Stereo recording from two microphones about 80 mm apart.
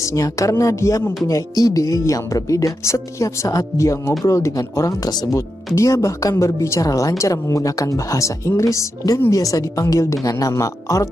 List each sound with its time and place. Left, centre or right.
0.0 s speech: left
5.8 s speech: left